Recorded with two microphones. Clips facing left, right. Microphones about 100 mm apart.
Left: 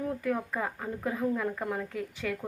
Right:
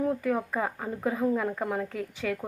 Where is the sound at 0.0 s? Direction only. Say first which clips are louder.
Right 4 dB; 20° right (ahead or behind).